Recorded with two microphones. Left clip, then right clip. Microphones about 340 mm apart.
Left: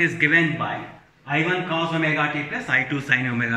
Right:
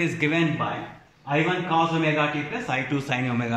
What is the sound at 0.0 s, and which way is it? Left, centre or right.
A man's voice, centre.